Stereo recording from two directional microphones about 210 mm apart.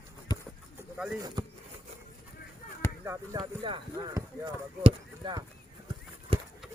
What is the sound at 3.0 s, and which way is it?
Speech, 20° right (ahead or behind).